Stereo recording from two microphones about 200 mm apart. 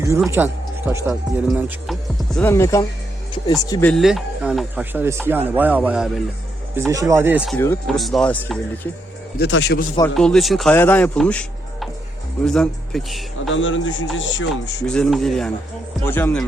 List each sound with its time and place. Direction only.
0.3 s speech: 10° right (ahead or behind)
2.3 s speech: 10° left (ahead or behind)
3.8 s speech: centre (ahead or behind)
6.7 s speech: 15° right (ahead or behind)
7.5 s speech: 10° left (ahead or behind)
7.9 s speech: centre (ahead or behind)
9.4 s speech: 60° left (ahead or behind)
10.2 s a man's voice: centre (ahead or behind)
13.5 s a man's voice: 70° left (ahead or behind)
14.5 s speech: 5° left (ahead or behind)